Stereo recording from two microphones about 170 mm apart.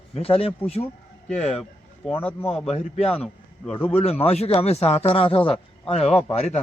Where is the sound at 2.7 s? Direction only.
40° left (ahead or behind).